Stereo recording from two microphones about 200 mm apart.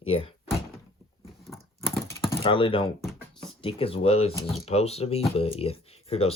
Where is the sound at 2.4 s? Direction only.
25° left (ahead or behind).